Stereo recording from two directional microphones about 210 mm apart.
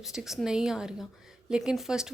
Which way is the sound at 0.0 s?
Centre (ahead or behind).